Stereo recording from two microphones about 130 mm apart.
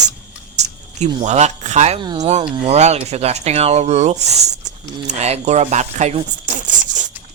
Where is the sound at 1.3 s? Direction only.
60° right (ahead or behind).